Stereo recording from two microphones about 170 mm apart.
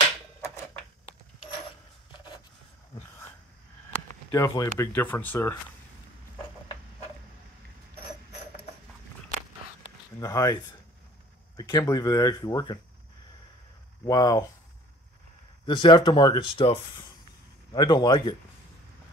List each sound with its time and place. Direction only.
4.3 s speech: 20° left (ahead or behind)
10.1 s speech: 20° left (ahead or behind)
14.0 s speech: 20° left (ahead or behind)
15.6 s speech: 30° left (ahead or behind)